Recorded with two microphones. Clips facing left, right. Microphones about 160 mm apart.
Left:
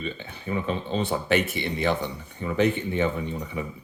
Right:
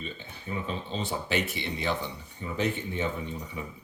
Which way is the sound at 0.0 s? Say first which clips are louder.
Left 6 dB; 70° left (ahead or behind).